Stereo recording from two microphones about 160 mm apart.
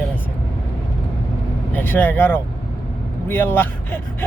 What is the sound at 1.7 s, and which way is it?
Speech, 10° left (ahead or behind).